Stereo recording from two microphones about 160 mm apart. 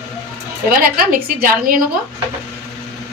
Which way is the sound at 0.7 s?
65° right (ahead or behind).